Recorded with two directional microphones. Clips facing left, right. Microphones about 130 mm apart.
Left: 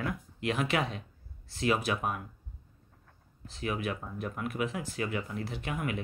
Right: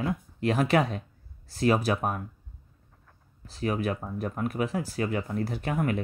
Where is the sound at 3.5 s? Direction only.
40° right (ahead or behind).